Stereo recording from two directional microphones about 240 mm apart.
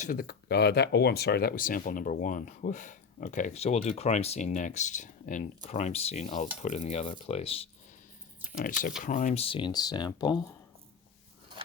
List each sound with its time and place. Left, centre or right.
0.0 s speech: left
9.0 s speech: left